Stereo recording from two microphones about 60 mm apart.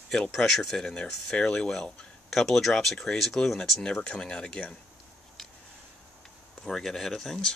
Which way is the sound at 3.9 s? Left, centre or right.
Centre.